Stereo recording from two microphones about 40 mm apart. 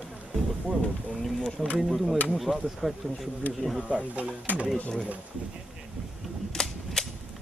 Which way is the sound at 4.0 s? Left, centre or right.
Right.